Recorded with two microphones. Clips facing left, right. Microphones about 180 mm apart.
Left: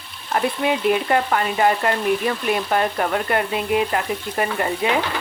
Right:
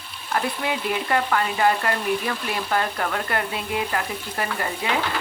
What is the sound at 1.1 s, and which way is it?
Speech, 25° left (ahead or behind).